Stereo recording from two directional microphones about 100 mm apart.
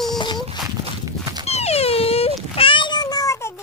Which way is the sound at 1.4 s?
90° left.